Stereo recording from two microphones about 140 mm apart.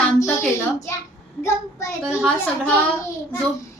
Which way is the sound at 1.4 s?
20° left (ahead or behind).